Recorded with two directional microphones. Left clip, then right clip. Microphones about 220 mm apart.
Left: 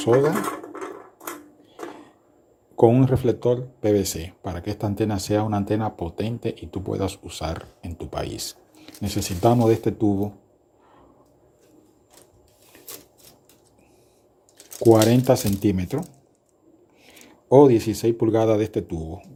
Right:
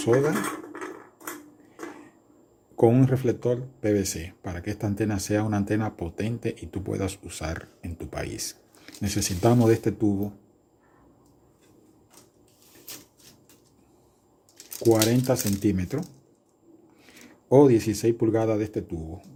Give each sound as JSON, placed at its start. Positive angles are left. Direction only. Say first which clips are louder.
{"t": 0.0, "sound": "speech", "louder": "left 4 dB", "side_deg": 5}
{"t": 2.7, "sound": "speech", "louder": "left 4 dB", "side_deg": 5}
{"t": 14.8, "sound": "speech", "louder": "left 5 dB", "side_deg": 30}
{"t": 15.2, "sound": "speech", "louder": "left 5 dB", "side_deg": 15}